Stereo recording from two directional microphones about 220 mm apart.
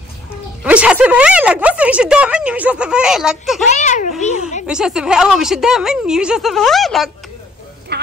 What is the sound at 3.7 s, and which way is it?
Speech, 35° left (ahead or behind).